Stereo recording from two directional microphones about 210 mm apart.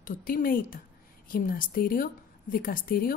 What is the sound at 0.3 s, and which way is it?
A woman's voice, 45° left (ahead or behind).